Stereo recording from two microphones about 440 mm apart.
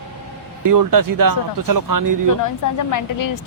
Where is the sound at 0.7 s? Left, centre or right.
Right.